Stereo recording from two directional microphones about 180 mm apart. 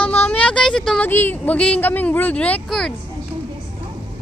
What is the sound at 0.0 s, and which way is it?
Speech, 10° left (ahead or behind).